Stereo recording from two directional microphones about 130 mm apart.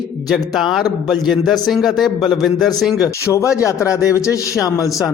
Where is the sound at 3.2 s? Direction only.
25° left (ahead or behind).